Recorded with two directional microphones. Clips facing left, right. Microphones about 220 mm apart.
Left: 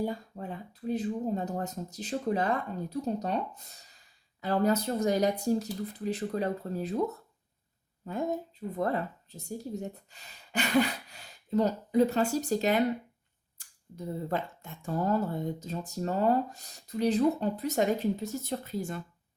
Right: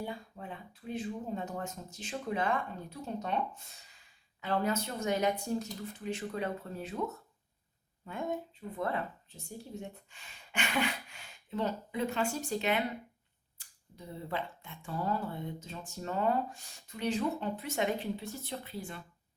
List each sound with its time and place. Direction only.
0.0 s speech: 40° left (ahead or behind)
13.6 s camera: 45° left (ahead or behind)
13.9 s speech: 45° left (ahead or behind)